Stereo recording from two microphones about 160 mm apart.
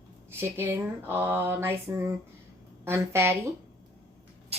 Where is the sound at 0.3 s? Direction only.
15° right (ahead or behind).